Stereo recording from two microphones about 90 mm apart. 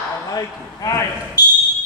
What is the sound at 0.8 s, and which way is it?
Basketball bounce, 40° left (ahead or behind).